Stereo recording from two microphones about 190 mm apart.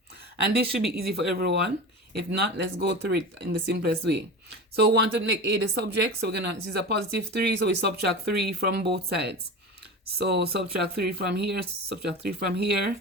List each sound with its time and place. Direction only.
0.4 s speech: 55° right (ahead or behind)